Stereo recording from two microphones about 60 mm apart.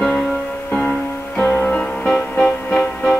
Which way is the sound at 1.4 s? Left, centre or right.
Left.